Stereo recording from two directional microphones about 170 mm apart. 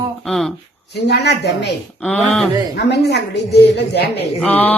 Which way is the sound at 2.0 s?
5° left (ahead or behind).